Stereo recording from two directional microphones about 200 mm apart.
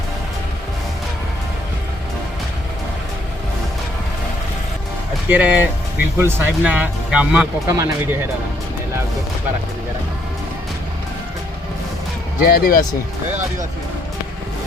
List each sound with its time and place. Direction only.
5.3 s speech: 10° right (ahead or behind)
12.4 s speech: 50° left (ahead or behind)